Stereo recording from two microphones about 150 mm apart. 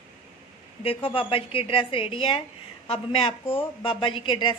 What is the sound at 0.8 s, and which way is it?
A woman's voice, 35° left (ahead or behind).